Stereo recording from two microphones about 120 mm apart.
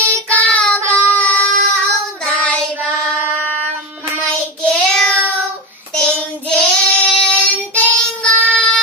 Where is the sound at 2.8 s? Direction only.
15° right (ahead or behind).